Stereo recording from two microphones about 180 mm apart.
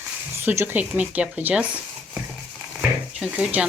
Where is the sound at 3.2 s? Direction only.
5° right (ahead or behind).